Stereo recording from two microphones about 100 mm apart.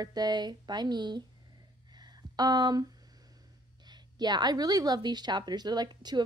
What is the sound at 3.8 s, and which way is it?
A woman's voice, 45° right (ahead or behind).